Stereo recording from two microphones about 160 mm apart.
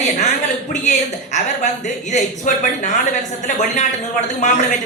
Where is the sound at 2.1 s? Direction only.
50° left (ahead or behind).